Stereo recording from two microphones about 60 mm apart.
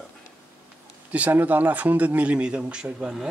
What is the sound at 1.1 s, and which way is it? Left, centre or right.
Speech, right.